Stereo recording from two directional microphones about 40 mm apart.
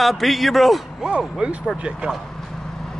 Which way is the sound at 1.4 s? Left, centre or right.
Right.